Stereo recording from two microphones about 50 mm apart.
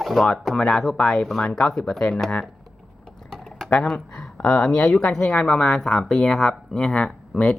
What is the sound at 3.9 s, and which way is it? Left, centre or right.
Speech, centre.